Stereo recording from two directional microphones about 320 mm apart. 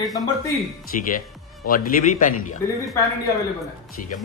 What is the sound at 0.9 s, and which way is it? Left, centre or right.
Speech, left.